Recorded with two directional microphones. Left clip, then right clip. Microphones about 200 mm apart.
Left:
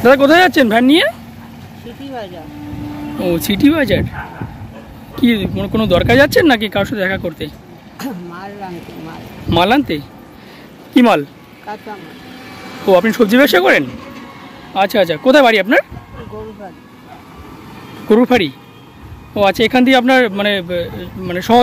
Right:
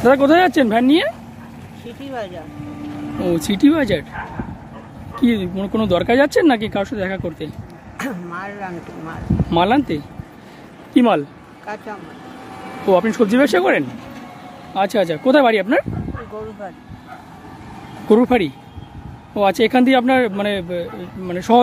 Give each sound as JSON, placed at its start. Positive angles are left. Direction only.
{"t": 0.0, "sound": "speech", "side_deg": 0}
{"t": 3.2, "sound": "speech", "side_deg": 0}
{"t": 5.2, "sound": "speech", "side_deg": 0}
{"t": 8.0, "sound": "speech", "side_deg": -15}
{"t": 9.5, "sound": "speech", "side_deg": 0}
{"t": 11.6, "sound": "speech", "side_deg": -10}
{"t": 12.8, "sound": "speech", "side_deg": 0}
{"t": 13.9, "sound": "a sound", "side_deg": -60}
{"t": 14.7, "sound": "speech", "side_deg": 0}
{"t": 18.0, "sound": "speech", "side_deg": -5}